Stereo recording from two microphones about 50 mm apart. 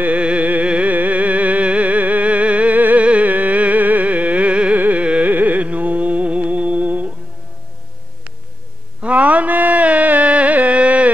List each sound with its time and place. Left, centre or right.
0.0 s music: right
9.0 s music: right